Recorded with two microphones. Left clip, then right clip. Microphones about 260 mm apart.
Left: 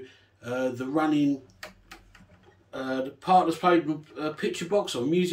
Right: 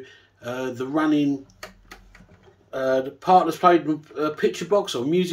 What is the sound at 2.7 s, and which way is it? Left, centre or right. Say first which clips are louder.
Speech: right 9 dB; centre.